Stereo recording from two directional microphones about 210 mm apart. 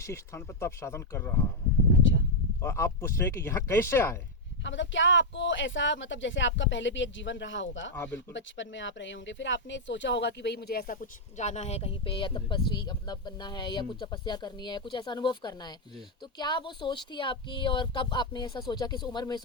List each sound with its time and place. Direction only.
0.0 s speech: 10° left (ahead or behind)
2.0 s a sound: 60° left (ahead or behind)
2.6 s speech: 10° left (ahead or behind)
4.6 s speech: 60° left (ahead or behind)
7.9 s speech: 10° left (ahead or behind)
8.3 s speech: 60° left (ahead or behind); by 19.4 s 20° left (ahead or behind)